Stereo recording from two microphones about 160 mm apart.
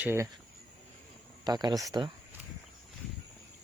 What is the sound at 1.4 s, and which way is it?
Speech, 25° right (ahead or behind).